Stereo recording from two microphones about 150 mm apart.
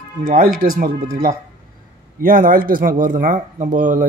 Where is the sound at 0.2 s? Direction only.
65° right (ahead or behind).